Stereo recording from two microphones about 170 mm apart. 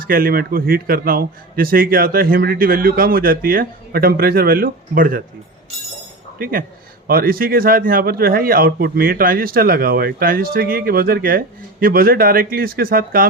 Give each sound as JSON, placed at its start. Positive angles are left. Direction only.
{"t": 0.0, "sound": "speech", "side_deg": -55}
{"t": 6.4, "sound": "speech", "side_deg": -55}